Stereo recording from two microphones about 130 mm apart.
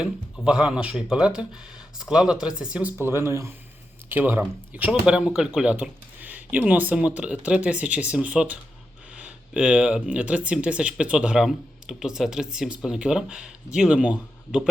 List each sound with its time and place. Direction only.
0.4 s speech: 5° right (ahead or behind)
3.0 s speech: 20° right (ahead or behind)